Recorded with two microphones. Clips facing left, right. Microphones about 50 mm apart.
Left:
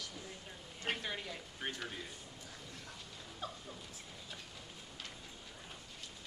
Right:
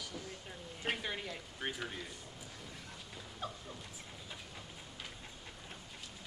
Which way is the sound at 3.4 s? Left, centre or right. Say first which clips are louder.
Right 2 dB; centre.